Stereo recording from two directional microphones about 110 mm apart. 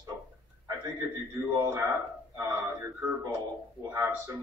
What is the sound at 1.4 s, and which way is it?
Speech, 25° right (ahead or behind).